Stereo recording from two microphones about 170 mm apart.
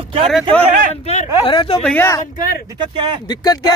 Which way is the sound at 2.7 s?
25° right (ahead or behind).